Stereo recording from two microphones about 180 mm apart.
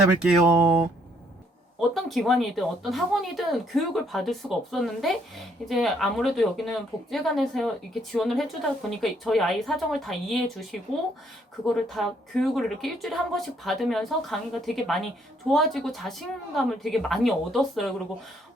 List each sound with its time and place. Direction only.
0.2 s a woman's voice: 5° right (ahead or behind)
1.9 s a woman's voice: centre (ahead or behind)